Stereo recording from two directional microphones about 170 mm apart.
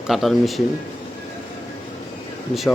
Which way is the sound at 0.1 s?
Centre (ahead or behind).